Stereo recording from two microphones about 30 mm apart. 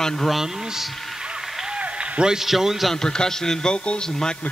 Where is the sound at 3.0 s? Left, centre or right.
Left.